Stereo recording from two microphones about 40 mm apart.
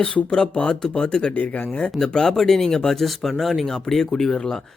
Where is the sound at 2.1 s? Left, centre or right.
Centre.